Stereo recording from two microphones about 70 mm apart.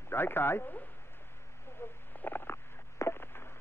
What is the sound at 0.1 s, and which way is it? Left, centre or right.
Speech, left.